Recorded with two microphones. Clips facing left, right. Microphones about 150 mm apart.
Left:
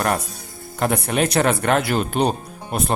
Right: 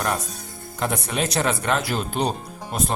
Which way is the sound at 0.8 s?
60° left (ahead or behind).